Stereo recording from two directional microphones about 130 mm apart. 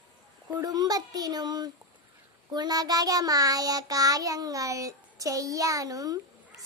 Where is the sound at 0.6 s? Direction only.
30° right (ahead or behind).